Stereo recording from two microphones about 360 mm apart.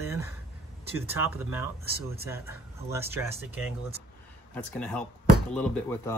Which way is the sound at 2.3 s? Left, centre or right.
Centre.